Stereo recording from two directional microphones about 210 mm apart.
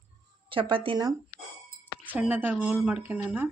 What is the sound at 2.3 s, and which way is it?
Speech, 10° right (ahead or behind).